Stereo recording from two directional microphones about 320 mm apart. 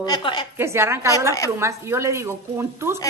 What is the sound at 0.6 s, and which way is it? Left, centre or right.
A woman's voice, centre.